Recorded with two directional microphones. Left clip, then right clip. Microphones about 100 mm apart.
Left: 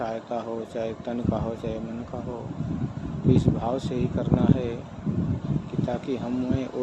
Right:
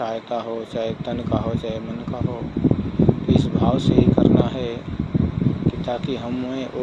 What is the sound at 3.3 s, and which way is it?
Speech, 20° left (ahead or behind).